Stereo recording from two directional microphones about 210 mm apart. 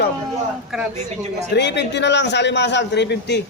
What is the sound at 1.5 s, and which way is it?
A man's voice, 55° left (ahead or behind).